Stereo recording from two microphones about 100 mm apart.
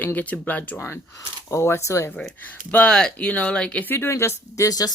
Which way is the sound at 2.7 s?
10° left (ahead or behind).